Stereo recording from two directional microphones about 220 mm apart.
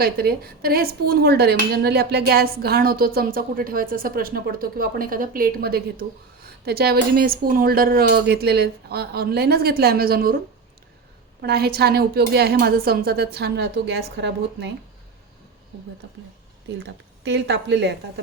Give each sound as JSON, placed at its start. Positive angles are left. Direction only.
{"t": 0.0, "sound": "speech", "side_deg": -45}
{"t": 11.4, "sound": "speech", "side_deg": -45}
{"t": 16.8, "sound": "speech", "side_deg": -55}